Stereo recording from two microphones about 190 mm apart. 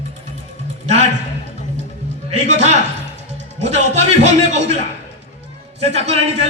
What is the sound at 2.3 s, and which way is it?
Speech, 35° right (ahead or behind).